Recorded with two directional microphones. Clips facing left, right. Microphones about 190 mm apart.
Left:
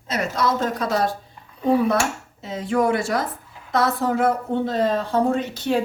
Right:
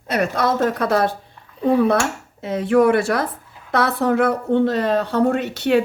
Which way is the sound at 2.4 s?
65° right (ahead or behind).